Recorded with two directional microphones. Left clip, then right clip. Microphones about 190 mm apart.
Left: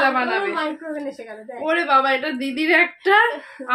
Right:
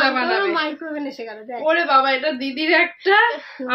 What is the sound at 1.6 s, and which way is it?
A woman's voice, 20° left (ahead or behind).